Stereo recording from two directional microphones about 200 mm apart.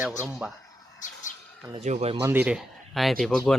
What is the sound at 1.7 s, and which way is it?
Speech, 35° right (ahead or behind).